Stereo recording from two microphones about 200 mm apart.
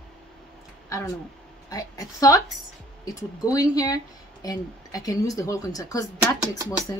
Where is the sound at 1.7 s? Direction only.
15° left (ahead or behind).